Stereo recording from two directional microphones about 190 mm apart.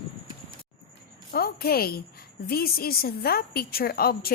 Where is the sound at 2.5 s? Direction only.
50° left (ahead or behind).